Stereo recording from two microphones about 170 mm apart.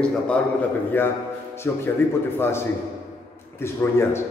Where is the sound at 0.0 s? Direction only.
10° left (ahead or behind).